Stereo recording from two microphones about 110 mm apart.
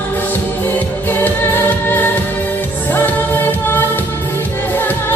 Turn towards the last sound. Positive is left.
turn(degrees=20)  # may be behind; listen again after turning